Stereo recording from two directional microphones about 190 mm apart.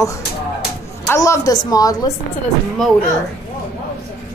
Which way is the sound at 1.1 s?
15° left (ahead or behind).